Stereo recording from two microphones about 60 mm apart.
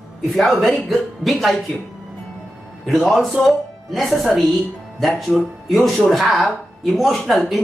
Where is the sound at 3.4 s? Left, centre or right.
Centre.